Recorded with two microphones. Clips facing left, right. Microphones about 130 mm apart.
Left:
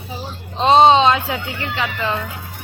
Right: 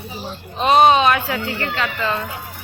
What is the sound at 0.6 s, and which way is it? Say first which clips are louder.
Speech: left 2 dB; 25° left (ahead or behind).